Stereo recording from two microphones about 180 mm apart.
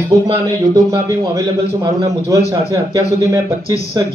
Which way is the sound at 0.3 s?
20° right (ahead or behind).